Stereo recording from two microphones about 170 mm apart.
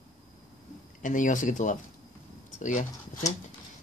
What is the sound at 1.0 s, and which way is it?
Speech, 50° left (ahead or behind).